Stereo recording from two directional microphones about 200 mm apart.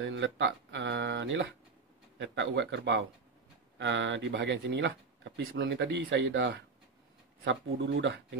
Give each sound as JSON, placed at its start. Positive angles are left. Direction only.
{"t": 0.0, "sound": "speech", "side_deg": -65}
{"t": 7.4, "sound": "speech", "side_deg": -70}